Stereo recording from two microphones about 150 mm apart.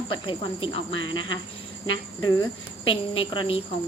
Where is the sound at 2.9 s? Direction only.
35° left (ahead or behind).